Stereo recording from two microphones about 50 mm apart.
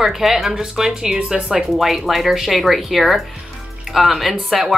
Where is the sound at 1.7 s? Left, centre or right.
Centre.